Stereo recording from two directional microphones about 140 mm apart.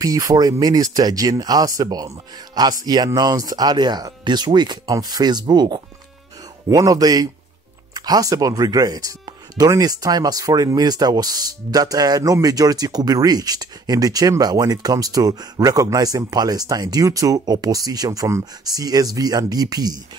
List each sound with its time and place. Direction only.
0.0 s speech: 25° right (ahead or behind)